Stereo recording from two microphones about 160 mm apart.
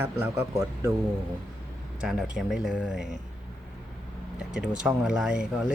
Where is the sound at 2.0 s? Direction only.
5° right (ahead or behind).